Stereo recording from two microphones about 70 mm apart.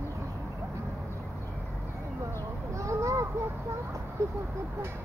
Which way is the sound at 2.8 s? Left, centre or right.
Right.